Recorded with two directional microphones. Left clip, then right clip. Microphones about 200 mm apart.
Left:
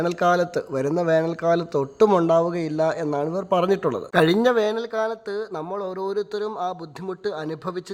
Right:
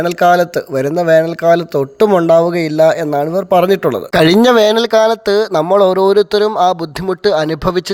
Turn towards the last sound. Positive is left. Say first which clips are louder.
# right 16 dB
turn(degrees=-30)  # may be behind; listen again after turning